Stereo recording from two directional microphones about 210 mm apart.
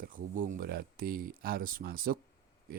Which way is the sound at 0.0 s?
40° right (ahead or behind).